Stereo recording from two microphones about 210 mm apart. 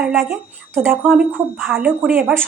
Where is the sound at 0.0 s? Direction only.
Centre (ahead or behind).